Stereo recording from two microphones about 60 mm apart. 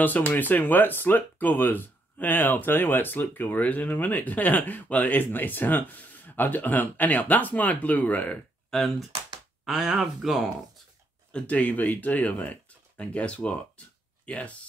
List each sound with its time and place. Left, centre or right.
0.3 s speech: left
8.6 s a sound: centre
9.7 s speech: centre
11.3 s speech: left